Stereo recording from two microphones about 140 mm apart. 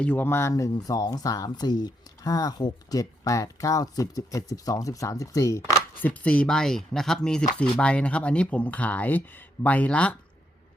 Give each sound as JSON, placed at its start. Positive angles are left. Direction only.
{"t": 0.0, "sound": "speech", "side_deg": 10}